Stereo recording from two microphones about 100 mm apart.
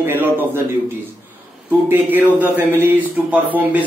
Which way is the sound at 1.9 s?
20° right (ahead or behind).